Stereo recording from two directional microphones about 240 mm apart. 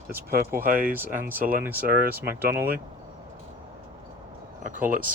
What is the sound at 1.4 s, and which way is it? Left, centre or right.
Speech, right.